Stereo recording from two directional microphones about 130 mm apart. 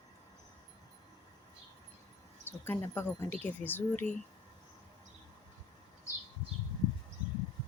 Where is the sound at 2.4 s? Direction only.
15° left (ahead or behind).